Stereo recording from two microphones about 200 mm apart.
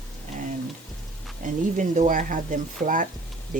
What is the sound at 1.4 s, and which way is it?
Speech, 40° right (ahead or behind).